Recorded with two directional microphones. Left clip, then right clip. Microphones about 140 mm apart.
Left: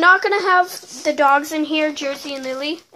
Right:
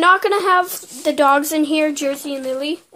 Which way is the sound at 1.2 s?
65° right (ahead or behind).